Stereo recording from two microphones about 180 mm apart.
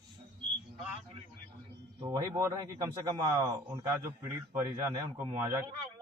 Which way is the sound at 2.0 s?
15° right (ahead or behind).